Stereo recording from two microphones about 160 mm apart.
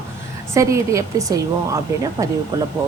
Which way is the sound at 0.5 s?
20° right (ahead or behind).